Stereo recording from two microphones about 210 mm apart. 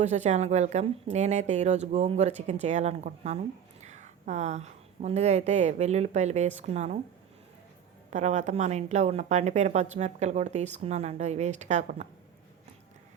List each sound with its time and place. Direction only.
0.0 s a woman's voice: 35° right (ahead or behind)
8.1 s a woman's voice: 35° right (ahead or behind)